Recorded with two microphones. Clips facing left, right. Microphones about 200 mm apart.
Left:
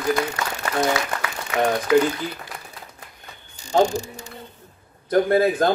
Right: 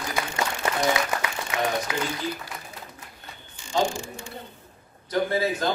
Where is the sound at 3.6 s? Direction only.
40° left (ahead or behind).